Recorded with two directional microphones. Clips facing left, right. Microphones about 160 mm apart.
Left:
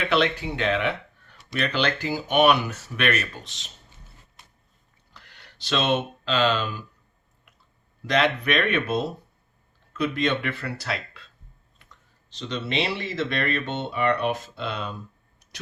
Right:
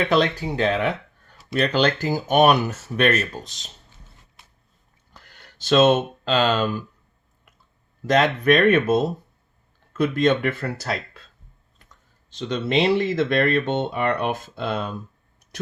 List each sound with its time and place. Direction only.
0.0 s speech: 40° right (ahead or behind)
5.1 s speech: 45° right (ahead or behind)
8.0 s speech: 45° right (ahead or behind)
12.3 s speech: 50° right (ahead or behind)